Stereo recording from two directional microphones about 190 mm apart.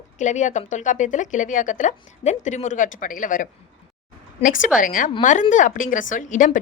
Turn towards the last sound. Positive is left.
turn(degrees=45)  # may be behind; listen again after turning